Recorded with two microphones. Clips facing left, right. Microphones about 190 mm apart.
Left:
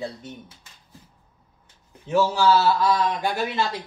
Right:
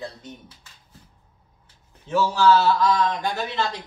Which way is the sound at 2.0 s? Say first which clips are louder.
Right 1 dB; 10° left (ahead or behind).